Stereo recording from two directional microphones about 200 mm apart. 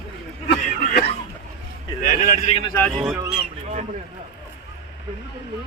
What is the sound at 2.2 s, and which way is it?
Speech, 45° left (ahead or behind).